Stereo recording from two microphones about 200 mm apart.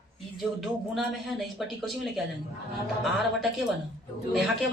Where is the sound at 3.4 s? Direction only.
Centre (ahead or behind).